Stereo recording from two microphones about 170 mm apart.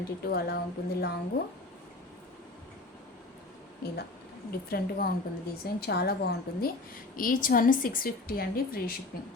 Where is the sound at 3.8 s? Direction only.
70° left (ahead or behind).